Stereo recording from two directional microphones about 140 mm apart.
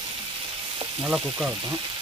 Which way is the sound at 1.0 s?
5° right (ahead or behind).